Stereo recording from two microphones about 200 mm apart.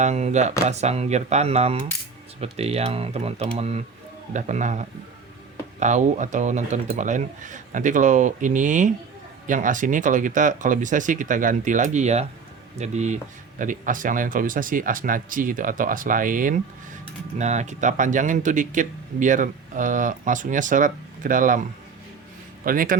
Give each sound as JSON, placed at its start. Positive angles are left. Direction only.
{"t": 0.0, "sound": "speech", "side_deg": -35}
{"t": 22.6, "sound": "speech", "side_deg": -45}